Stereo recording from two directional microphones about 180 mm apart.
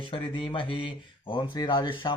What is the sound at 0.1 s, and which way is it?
Speech, 30° left (ahead or behind).